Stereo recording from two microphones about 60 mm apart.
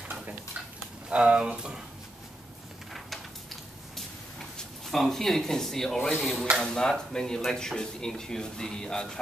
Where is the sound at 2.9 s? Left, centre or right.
Centre.